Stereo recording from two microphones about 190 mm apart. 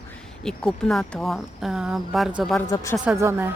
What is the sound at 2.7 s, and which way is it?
Speech, 20° left (ahead or behind).